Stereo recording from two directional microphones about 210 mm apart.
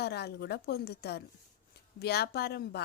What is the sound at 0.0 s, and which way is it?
A woman's voice, 50° left (ahead or behind).